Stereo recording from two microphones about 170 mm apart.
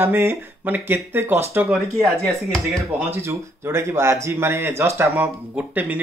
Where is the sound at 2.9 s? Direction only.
15° right (ahead or behind).